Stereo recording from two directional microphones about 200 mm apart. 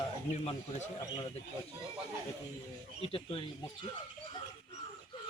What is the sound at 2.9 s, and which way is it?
Speech, 30° left (ahead or behind).